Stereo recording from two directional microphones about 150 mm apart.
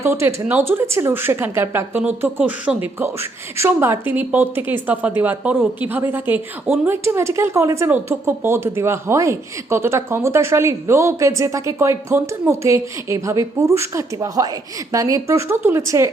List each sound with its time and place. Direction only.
0.0 s speech: 15° right (ahead or behind)